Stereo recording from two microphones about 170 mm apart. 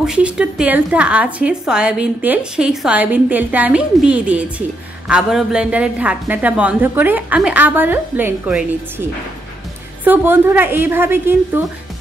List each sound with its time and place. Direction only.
0.0 s speech: 5° right (ahead or behind)